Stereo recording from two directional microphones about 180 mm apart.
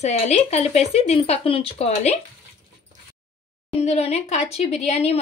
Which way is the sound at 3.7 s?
35° left (ahead or behind).